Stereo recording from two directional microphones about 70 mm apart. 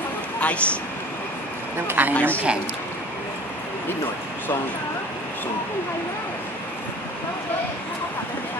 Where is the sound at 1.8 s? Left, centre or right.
Right.